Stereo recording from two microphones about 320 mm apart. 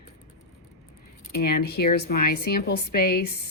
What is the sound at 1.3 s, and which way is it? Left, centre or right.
Speech, left.